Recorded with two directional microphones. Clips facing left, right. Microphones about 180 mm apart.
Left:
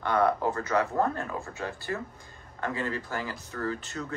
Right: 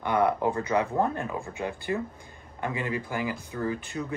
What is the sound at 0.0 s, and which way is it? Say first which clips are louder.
Speech: right 1 dB; 15° right (ahead or behind).